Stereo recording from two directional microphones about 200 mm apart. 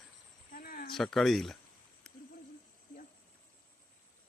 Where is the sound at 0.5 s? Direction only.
45° left (ahead or behind).